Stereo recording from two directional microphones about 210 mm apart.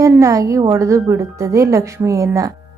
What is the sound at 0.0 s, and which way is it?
Speech, 15° right (ahead or behind).